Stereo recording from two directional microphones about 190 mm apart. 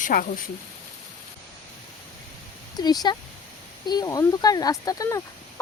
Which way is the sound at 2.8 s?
20° left (ahead or behind).